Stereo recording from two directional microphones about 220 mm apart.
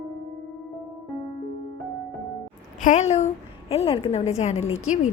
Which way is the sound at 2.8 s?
30° left (ahead or behind).